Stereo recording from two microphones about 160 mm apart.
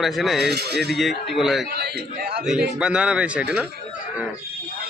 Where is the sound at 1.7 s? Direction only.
85° right.